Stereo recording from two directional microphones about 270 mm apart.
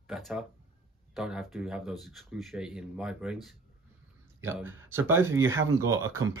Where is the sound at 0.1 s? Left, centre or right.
Centre.